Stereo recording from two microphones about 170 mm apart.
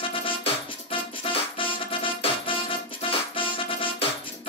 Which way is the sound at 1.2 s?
30° left (ahead or behind).